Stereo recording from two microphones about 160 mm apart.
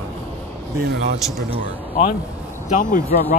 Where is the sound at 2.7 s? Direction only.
55° left (ahead or behind).